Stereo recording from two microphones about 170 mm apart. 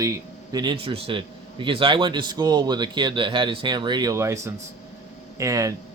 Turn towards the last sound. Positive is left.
turn(degrees=-20)  # may be behind; listen again after turning